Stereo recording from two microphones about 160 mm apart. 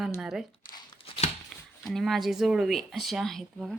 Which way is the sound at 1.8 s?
Centre (ahead or behind).